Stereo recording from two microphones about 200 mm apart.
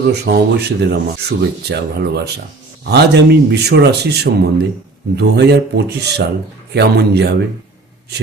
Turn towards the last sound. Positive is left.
turn(degrees=-55)  # may be behind; listen again after turning